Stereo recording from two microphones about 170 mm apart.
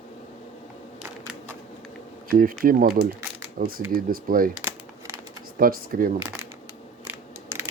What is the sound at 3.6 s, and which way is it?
Speech, 60° right (ahead or behind).